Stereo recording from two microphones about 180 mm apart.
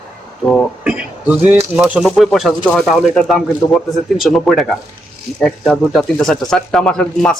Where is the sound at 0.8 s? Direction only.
5° right (ahead or behind).